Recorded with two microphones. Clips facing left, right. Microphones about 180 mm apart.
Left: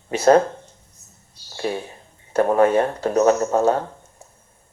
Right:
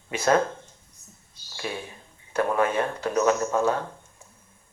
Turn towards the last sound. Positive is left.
turn(degrees=40)  # may be behind; listen again after turning